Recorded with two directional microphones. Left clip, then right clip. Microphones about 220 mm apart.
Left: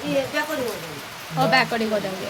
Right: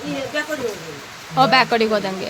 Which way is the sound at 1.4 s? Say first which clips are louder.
Right 5 dB; 25° right (ahead or behind).